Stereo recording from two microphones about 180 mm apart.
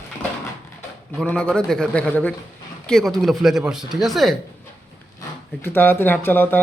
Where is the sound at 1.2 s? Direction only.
5° left (ahead or behind).